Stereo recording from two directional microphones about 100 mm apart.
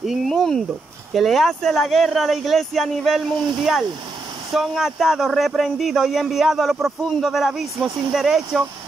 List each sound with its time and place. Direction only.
0.0 s speech: centre (ahead or behind)